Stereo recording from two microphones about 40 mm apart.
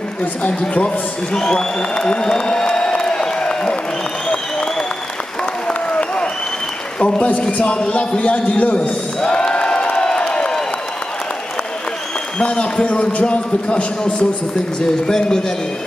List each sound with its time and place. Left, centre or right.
0.2 s a man's voice: left
0.7 s a man's voice: left
5.7 s applause: left
7.0 s a man's voice: left
9.2 s a sound: left
12.4 s a man's voice: left
15.0 s speech: centre